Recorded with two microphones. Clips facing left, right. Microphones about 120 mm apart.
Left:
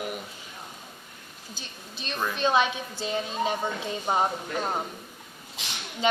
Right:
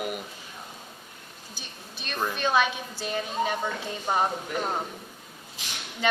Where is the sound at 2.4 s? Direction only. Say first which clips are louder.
Left 2 dB; 20° left (ahead or behind).